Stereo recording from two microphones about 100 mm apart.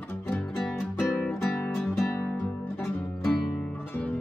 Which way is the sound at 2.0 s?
25° left (ahead or behind).